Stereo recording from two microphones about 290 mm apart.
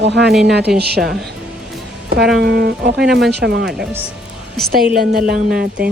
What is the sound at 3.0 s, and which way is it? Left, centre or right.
Speech, centre.